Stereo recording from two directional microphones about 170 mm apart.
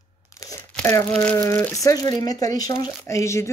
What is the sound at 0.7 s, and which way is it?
Speech, 10° left (ahead or behind).